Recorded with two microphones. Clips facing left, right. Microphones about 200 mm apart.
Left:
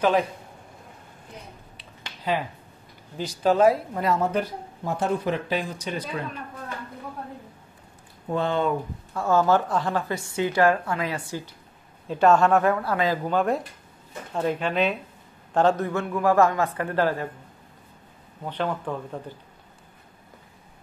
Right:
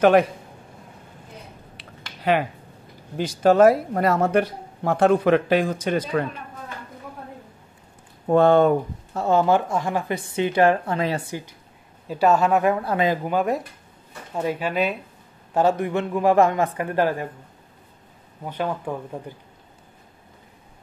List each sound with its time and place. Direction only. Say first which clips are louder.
0.0 s speech: right 6 dB; 70° right (ahead or behind)
1.8 s a sound: right 2 dB; 70° right (ahead or behind)
3.2 s speech: right 5 dB; 70° right (ahead or behind)
8.3 s speech: right 9 dB; 50° right (ahead or behind)
9.1 s a man's voice: right 2 dB; 20° right (ahead or behind)
12.1 s a man's voice: even; 5° right (ahead or behind)
12.7 s a man's voice: right 2 dB; 20° right (ahead or behind)
18.4 s a man's voice: right 1 dB; 10° right (ahead or behind)